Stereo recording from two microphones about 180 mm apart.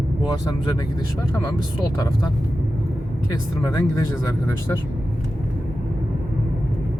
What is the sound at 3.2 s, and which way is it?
Speech, 20° left (ahead or behind).